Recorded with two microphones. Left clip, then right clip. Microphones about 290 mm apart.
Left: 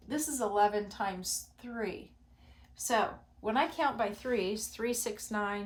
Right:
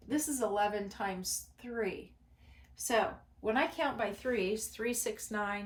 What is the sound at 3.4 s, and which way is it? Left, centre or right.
Speech, centre.